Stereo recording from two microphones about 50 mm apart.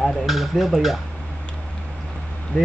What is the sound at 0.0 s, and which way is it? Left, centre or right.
Speech, centre.